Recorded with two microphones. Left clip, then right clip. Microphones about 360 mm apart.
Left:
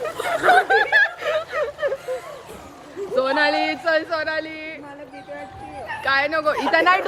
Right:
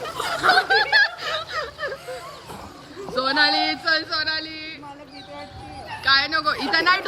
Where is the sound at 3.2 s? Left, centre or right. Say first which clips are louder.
Even; centre.